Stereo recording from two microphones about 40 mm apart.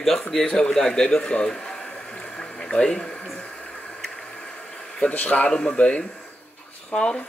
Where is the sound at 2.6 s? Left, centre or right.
Centre.